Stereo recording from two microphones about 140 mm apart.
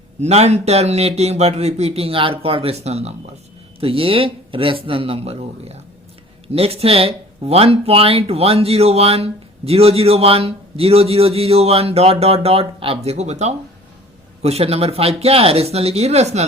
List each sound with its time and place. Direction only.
0.2 s speech: 50° right (ahead or behind)